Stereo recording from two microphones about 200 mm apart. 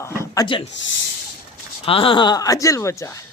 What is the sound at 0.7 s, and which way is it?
Speech, 70° left (ahead or behind).